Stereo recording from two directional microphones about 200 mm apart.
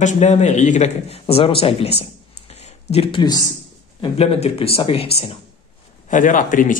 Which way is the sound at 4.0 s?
30° left (ahead or behind).